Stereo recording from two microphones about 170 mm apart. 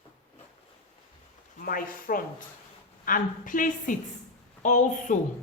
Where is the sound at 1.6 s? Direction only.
55° left (ahead or behind).